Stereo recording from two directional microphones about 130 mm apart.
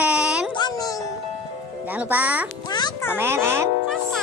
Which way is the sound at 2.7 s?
35° left (ahead or behind).